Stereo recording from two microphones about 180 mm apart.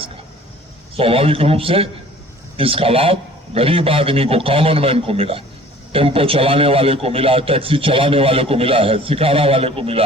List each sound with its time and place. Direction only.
0.9 s a man's voice: 30° right (ahead or behind)